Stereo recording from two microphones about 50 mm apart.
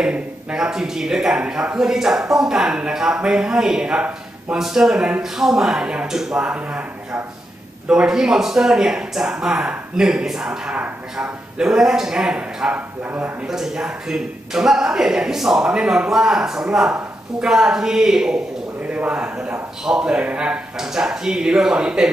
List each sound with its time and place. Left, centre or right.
0.0 s a man's voice: centre
4.6 s a man's voice: centre
5.8 s a man's voice: right
6.0 s a man's voice: centre
6.4 s speech: right
7.9 s a man's voice: centre
12.7 s speech: right
13.5 s a man's voice: centre
18.8 s a man's voice: right
20.7 s a man's voice: centre